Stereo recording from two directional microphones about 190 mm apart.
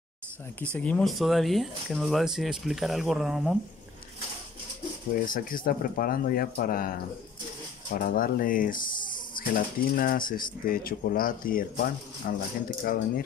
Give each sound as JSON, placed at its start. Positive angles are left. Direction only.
{"t": 0.7, "sound": "speech", "side_deg": 5}
{"t": 5.2, "sound": "speech", "side_deg": 45}